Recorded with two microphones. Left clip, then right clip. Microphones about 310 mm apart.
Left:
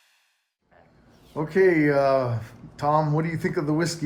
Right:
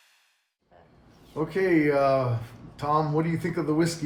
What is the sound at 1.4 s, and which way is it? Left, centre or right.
Speech, left.